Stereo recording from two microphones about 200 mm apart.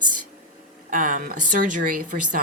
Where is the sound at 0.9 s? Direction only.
40° right (ahead or behind).